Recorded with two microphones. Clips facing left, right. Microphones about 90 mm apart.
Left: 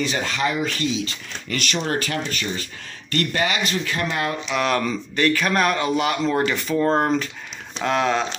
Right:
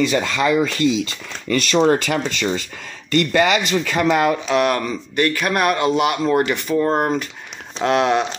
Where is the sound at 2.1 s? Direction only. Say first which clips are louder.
Right 6 dB; 90° right.